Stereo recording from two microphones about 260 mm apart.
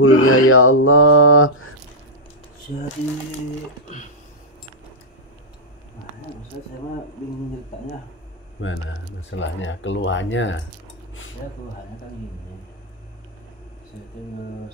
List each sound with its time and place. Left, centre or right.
0.0 s speech: left
8.5 s speech: left